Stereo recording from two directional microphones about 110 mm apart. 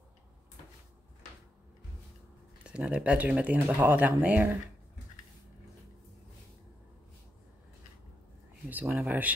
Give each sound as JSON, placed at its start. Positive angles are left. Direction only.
{"t": 2.6, "sound": "speech", "side_deg": -10}
{"t": 8.6, "sound": "speech", "side_deg": -15}